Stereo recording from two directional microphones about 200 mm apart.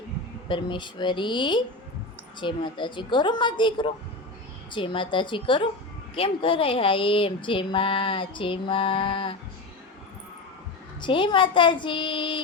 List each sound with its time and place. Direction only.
0.4 s speech: 25° left (ahead or behind)
11.0 s speech: 25° left (ahead or behind)